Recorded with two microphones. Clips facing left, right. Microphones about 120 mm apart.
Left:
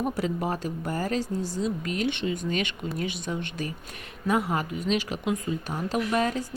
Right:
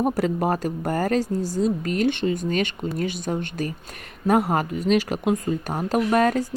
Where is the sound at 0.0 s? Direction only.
40° right (ahead or behind).